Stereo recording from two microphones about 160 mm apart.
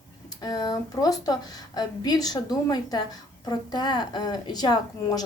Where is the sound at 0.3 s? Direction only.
25° left (ahead or behind).